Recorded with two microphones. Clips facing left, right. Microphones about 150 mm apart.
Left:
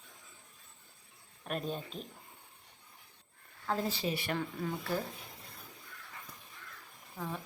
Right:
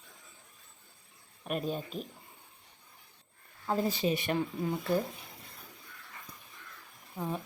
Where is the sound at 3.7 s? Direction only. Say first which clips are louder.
Right 4 dB; 15° right (ahead or behind).